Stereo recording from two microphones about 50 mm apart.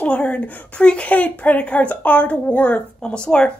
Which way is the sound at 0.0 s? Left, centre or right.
Left.